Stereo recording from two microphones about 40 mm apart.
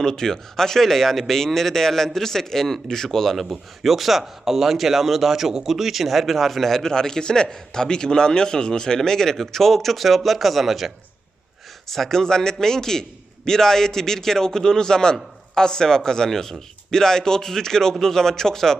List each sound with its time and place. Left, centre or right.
0.0 s a man's voice: centre
3.3 s a man's voice: centre